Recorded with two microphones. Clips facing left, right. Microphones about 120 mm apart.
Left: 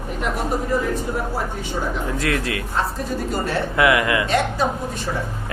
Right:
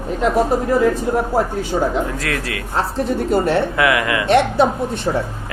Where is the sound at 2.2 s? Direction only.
25° left (ahead or behind).